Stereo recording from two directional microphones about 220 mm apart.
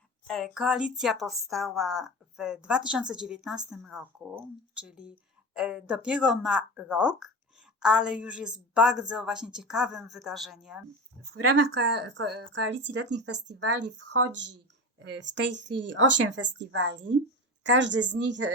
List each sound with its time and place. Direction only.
0.3 s speech: centre (ahead or behind)
11.9 s speech: 50° right (ahead or behind)